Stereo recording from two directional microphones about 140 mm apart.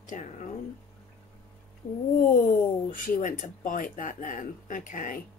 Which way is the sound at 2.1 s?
80° left.